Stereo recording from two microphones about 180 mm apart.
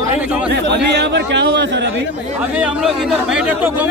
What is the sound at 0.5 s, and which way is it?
Speech, 70° right (ahead or behind).